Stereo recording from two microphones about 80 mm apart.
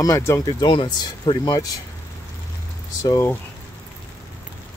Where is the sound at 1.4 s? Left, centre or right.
Left.